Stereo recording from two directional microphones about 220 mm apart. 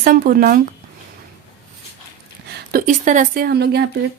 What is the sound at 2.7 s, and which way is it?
A woman's voice, 35° right (ahead or behind).